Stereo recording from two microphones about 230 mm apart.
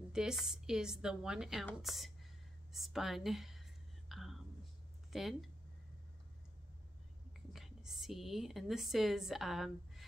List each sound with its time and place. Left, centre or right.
0.1 s speech: centre
4.1 s whispering: centre
5.1 s speech: centre
7.5 s speech: centre